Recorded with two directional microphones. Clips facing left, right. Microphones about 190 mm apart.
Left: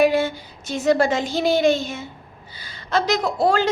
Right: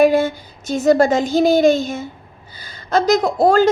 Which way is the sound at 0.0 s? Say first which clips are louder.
Right 4 dB; 45° right (ahead or behind).